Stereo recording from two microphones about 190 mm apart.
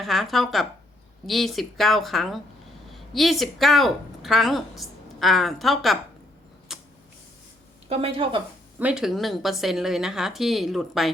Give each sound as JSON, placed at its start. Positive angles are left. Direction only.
{"t": 0.0, "sound": "a woman's voice", "side_deg": 0}
{"t": 6.7, "sound": "creak", "side_deg": 0}
{"t": 7.9, "sound": "a woman's voice", "side_deg": -30}
{"t": 8.8, "sound": "speech", "side_deg": -5}